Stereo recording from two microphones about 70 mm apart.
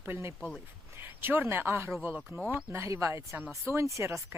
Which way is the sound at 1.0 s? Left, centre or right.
Right.